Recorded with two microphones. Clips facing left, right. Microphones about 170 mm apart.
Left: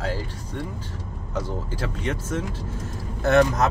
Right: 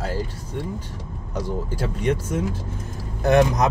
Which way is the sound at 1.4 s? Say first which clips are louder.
Right 2 dB; 15° right (ahead or behind).